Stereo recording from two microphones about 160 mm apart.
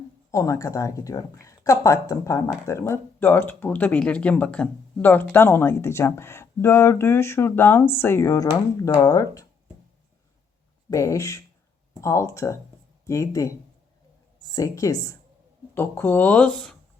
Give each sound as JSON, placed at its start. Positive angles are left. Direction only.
{"t": 0.3, "sound": "a woman's voice", "side_deg": 20}
{"t": 10.8, "sound": "a woman's voice", "side_deg": 20}